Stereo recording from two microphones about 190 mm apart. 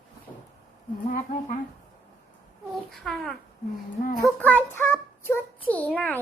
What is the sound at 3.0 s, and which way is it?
Speech, centre (ahead or behind).